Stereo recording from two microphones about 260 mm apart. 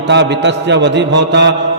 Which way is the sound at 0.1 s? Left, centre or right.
Right.